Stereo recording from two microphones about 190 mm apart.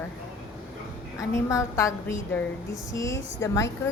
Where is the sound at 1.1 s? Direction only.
15° left (ahead or behind).